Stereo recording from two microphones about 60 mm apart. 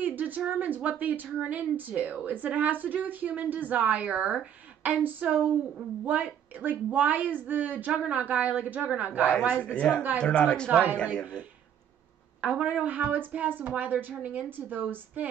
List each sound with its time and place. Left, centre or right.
0.0 s a sound: right
0.5 s a woman's voice: right
9.7 s speech: centre
10.7 s a woman's voice: right
12.4 s a woman's voice: right